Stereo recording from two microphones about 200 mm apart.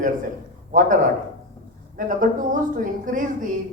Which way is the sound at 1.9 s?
40° right (ahead or behind).